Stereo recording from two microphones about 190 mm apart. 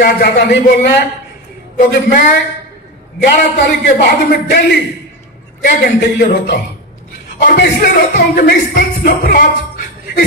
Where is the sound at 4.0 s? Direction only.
50° left (ahead or behind).